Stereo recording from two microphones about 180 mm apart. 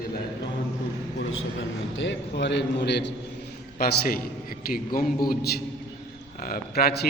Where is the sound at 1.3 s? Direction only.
90° left; by 3.1 s 70° left (ahead or behind).